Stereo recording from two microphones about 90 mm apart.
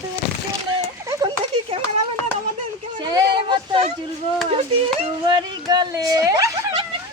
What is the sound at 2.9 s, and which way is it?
Speech, 55° right (ahead or behind).